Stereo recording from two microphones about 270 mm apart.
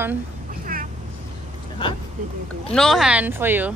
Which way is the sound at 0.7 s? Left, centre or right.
Right.